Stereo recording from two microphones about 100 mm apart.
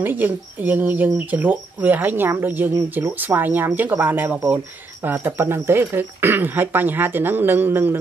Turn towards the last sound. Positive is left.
turn(degrees=-20)  # may be behind; listen again after turning